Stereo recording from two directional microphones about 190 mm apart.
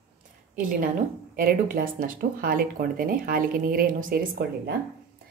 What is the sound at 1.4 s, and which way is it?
Speech, 45° right (ahead or behind).